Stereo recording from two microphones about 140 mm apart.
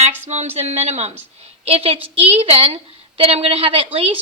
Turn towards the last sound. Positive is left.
turn(degrees=-40)  # may be behind; listen again after turning